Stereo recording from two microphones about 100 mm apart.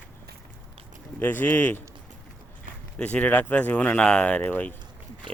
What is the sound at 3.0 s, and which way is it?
Speech, 15° left (ahead or behind).